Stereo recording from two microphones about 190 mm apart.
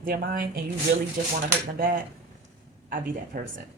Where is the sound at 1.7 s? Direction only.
50° right (ahead or behind).